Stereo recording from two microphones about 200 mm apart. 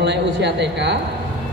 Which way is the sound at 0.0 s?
60° right (ahead or behind).